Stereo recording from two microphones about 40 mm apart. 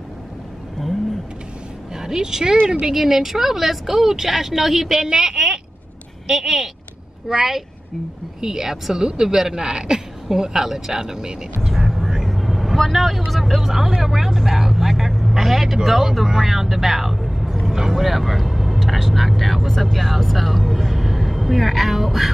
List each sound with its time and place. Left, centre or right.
2.0 s a woman's voice: centre
12.0 s vehicle: centre
13.3 s a woman's voice: centre